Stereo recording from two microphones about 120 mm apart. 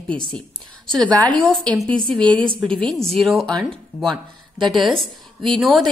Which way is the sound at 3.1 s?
Centre (ahead or behind).